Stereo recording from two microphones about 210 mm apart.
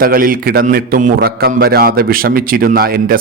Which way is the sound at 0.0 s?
45° right (ahead or behind).